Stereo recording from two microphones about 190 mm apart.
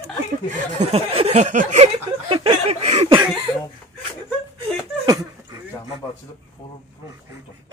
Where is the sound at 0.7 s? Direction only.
35° right (ahead or behind).